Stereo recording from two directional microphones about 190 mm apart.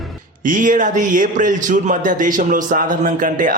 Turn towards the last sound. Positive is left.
turn(degrees=-45)  # may be behind; listen again after turning